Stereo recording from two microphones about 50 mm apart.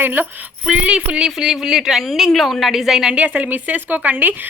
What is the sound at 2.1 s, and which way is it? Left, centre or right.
A woman's voice, centre.